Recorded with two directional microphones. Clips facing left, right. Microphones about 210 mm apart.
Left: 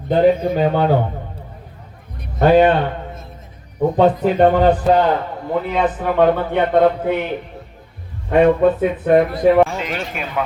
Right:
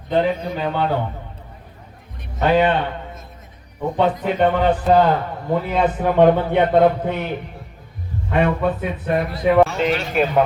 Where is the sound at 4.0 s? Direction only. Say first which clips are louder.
Left 4 dB; 40° left (ahead or behind).